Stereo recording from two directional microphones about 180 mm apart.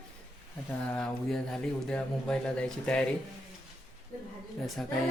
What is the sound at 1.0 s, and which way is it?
Speech, 5° left (ahead or behind).